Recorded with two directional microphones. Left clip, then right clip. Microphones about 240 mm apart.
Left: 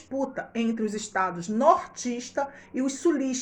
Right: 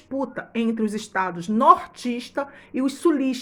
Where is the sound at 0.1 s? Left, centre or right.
Right.